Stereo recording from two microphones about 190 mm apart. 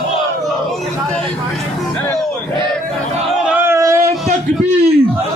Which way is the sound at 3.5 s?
10° right (ahead or behind).